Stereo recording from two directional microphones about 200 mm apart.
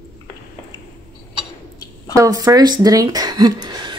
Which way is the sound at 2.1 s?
15° right (ahead or behind).